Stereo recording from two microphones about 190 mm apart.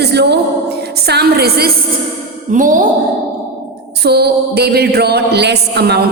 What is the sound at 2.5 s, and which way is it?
Speech, 45° right (ahead or behind).